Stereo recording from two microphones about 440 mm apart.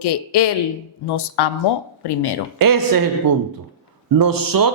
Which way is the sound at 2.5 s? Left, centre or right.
Right.